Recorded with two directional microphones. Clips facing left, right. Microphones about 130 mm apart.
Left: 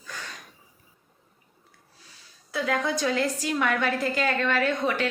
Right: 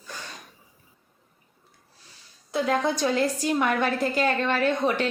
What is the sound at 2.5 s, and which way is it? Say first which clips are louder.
A woman's voice: right 3 dB; 30° right (ahead or behind).